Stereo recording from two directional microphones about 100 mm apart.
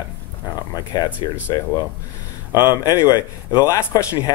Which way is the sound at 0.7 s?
40° left (ahead or behind).